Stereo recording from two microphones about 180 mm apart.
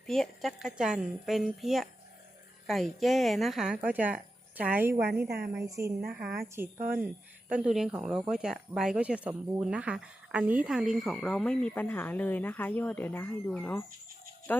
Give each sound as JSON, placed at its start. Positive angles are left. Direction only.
{"t": 0.1, "sound": "speech", "side_deg": 0}
{"t": 4.9, "sound": "a woman's voice", "side_deg": -65}
{"t": 5.8, "sound": "a woman's voice", "side_deg": -10}